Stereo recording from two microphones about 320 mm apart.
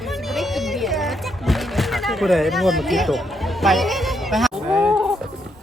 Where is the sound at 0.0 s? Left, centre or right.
Centre.